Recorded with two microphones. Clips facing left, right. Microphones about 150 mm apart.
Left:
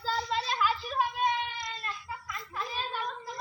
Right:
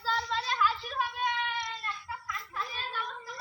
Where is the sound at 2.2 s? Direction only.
20° left (ahead or behind).